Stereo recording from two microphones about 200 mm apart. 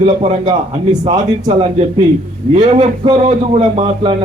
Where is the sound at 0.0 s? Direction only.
30° right (ahead or behind).